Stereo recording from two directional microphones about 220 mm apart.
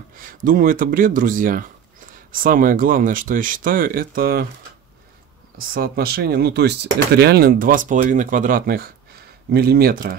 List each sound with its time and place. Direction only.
0.2 s speech: 40° right (ahead or behind)
5.7 s speech: 45° right (ahead or behind)